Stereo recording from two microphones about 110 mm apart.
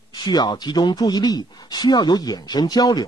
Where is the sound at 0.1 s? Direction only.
40° left (ahead or behind).